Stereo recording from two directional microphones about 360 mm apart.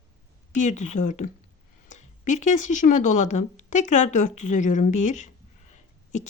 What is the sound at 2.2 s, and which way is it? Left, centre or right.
Speech, centre.